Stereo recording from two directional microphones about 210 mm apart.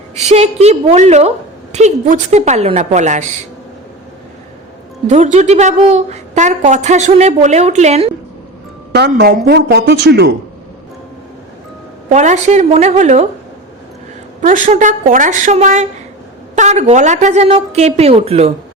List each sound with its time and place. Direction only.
0.3 s a woman's voice: 30° right (ahead or behind)
5.0 s a woman's voice: 35° right (ahead or behind)
8.9 s speech: 50° right (ahead or behind)
12.0 s a woman's voice: 35° right (ahead or behind)
14.4 s a woman's voice: 35° right (ahead or behind)